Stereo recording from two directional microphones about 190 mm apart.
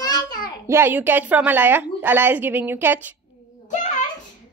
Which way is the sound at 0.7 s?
10° right (ahead or behind).